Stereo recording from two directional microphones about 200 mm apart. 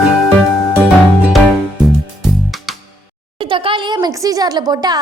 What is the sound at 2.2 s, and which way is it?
Music, centre (ahead or behind).